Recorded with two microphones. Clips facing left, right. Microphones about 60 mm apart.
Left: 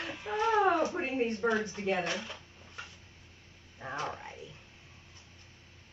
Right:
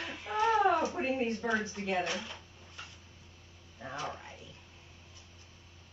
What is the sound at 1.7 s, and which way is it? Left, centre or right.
Speech, centre.